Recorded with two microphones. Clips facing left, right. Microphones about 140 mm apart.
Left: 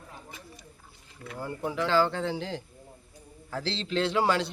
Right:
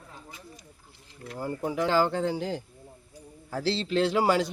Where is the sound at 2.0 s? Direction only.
10° right (ahead or behind).